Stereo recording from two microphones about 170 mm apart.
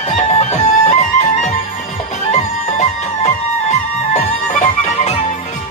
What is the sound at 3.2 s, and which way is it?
Music, 40° left (ahead or behind).